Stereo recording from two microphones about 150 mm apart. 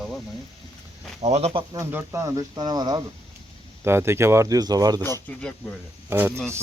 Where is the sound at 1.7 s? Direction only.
15° right (ahead or behind).